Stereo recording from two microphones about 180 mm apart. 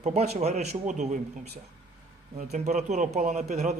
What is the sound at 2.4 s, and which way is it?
Speech, 40° right (ahead or behind).